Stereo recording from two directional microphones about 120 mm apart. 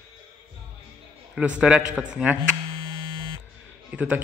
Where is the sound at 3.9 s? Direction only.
15° right (ahead or behind).